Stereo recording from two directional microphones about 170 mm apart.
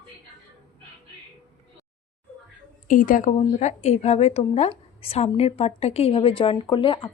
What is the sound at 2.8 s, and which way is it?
A woman's voice, 55° left (ahead or behind).